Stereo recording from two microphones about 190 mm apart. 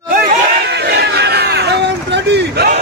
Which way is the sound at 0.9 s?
60° right (ahead or behind).